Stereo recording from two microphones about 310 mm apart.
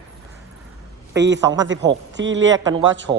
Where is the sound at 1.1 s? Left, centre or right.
Right.